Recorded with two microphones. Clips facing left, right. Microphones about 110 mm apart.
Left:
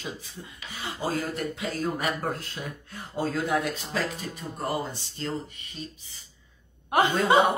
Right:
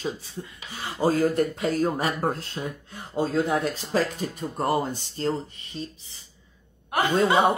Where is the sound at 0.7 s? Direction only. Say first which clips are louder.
Right 6 dB; 40° right (ahead or behind).